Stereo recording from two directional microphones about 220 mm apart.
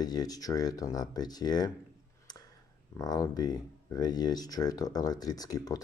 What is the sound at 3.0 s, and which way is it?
Speech, 15° left (ahead or behind).